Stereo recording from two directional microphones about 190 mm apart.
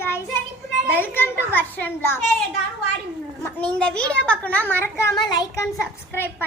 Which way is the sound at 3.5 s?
5° left (ahead or behind).